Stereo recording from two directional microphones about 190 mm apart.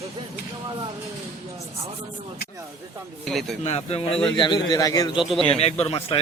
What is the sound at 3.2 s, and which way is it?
Speech, centre (ahead or behind).